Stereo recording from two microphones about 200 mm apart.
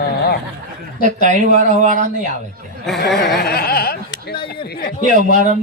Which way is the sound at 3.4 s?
50° left (ahead or behind).